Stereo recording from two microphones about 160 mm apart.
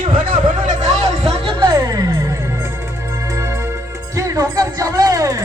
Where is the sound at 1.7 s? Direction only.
20° right (ahead or behind).